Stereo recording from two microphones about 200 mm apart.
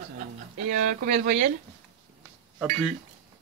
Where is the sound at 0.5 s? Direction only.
40° right (ahead or behind).